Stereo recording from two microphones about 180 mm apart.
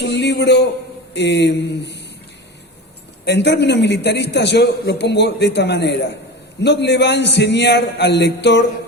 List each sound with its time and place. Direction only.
0.0 s a sound: 70° left (ahead or behind)
1.1 s a man's voice: 70° left (ahead or behind)
3.2 s a man's voice: 70° left (ahead or behind)